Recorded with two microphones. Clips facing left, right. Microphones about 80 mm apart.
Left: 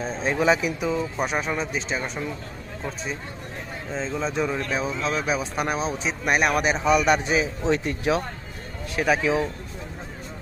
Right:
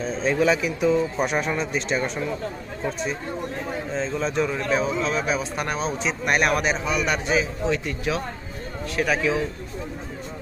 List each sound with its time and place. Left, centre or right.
0.0 s speech: centre
0.8 s speech: centre
3.9 s speech: centre
6.8 s a man's voice: left